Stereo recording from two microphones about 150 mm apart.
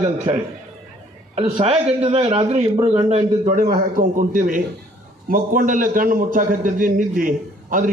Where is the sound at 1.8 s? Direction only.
45° right (ahead or behind).